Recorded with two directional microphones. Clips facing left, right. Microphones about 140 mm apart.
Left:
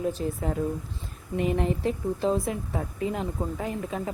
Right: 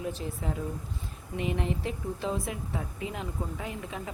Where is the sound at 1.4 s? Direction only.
40° left (ahead or behind).